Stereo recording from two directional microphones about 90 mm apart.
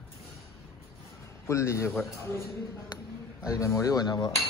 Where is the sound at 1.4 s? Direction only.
30° left (ahead or behind).